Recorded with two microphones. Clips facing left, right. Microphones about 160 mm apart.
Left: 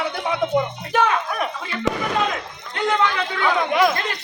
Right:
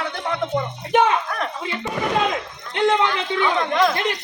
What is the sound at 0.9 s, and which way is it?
Speech, 25° right (ahead or behind).